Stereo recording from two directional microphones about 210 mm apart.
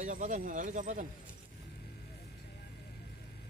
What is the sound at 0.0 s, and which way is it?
Speech, 40° right (ahead or behind).